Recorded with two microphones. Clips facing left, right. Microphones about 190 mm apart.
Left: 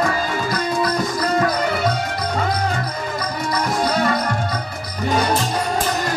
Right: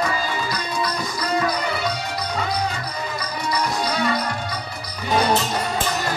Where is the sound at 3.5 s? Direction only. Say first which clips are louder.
Left 4 dB; 50° left (ahead or behind).